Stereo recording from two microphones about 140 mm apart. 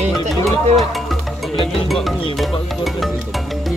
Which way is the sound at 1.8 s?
Centre (ahead or behind).